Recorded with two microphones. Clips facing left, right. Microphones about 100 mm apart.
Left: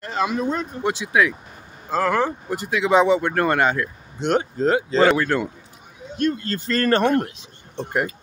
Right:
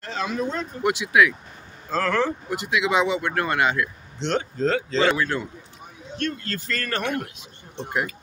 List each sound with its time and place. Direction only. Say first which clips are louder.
0.2 s speech: left 4 dB; 15° left (ahead or behind)
0.8 s speech: right 1 dB; 30° left (ahead or behind)
1.9 s speech: left 2 dB; 15° left (ahead or behind)
2.5 s speech: left 5 dB; 40° left (ahead or behind)
4.2 s speech: left 3 dB; 10° left (ahead or behind)
4.9 s speech: left 6 dB; 45° left (ahead or behind)
6.1 s speech: left 6 dB; 20° left (ahead or behind)
6.8 s speech: left 11 dB; 35° left (ahead or behind)